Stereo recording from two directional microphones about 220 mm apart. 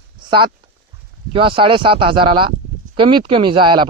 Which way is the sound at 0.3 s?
20° right (ahead or behind).